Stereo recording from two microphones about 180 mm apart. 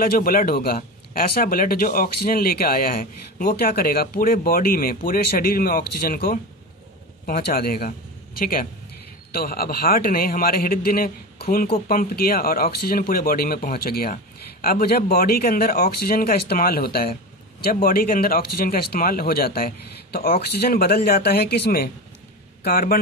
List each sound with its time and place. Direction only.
0.0 s a man's voice: 55° left (ahead or behind)